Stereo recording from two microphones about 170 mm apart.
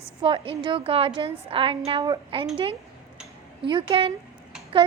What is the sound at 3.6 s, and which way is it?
Speech, 30° right (ahead or behind).